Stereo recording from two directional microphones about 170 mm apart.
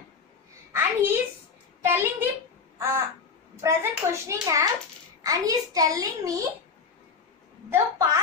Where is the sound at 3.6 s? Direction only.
15° right (ahead or behind).